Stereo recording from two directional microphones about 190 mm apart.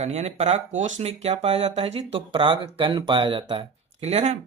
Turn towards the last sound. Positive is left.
turn(degrees=-35)  # may be behind; listen again after turning